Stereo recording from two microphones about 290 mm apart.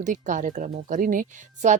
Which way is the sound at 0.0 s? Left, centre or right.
Right.